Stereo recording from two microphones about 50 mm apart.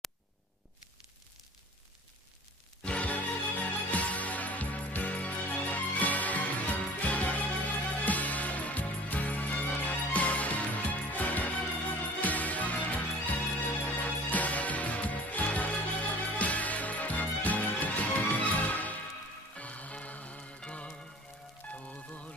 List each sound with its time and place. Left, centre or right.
2.8 s music: left
3.1 s music: left
21.7 s music: left